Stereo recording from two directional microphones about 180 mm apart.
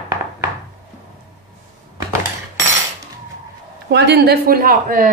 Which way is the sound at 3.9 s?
65° right (ahead or behind).